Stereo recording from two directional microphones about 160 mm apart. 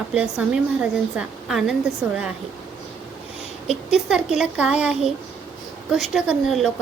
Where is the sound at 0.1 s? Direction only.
5° right (ahead or behind).